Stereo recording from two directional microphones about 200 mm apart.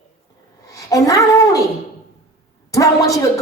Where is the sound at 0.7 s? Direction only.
15° left (ahead or behind).